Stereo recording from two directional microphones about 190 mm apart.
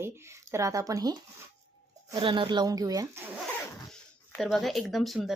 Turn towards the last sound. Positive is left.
turn(degrees=0)  # may be behind; listen again after turning